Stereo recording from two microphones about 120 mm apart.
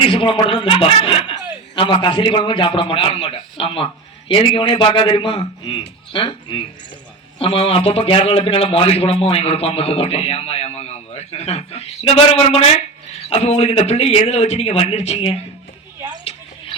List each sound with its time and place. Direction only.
0.1 s a man's voice: 45° left (ahead or behind)